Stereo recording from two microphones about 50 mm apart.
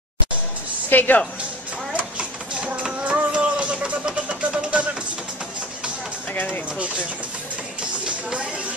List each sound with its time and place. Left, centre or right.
0.8 s a woman's voice: left
2.1 s a sound: centre
3.0 s music: right
6.3 s speech: left